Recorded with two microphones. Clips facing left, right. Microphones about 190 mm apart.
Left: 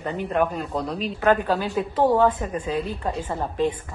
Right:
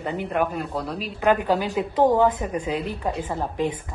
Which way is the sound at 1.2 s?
15° right (ahead or behind).